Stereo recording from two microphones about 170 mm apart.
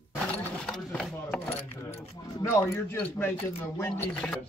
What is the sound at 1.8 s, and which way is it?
Speech, 15° left (ahead or behind).